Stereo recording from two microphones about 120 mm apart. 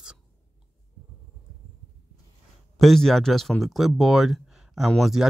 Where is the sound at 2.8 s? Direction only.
Centre (ahead or behind).